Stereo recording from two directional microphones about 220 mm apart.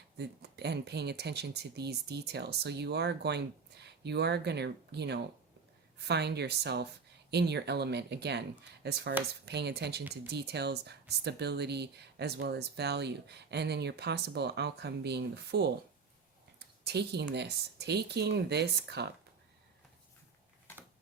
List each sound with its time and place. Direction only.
0.2 s speech: 50° right (ahead or behind)